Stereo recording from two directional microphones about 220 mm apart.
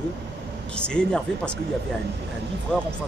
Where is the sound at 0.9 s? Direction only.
5° left (ahead or behind).